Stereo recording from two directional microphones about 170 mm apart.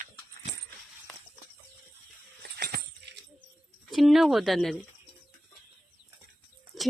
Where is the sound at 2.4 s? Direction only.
70° right (ahead or behind).